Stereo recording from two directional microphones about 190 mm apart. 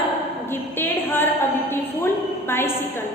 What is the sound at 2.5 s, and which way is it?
Speech, 10° left (ahead or behind).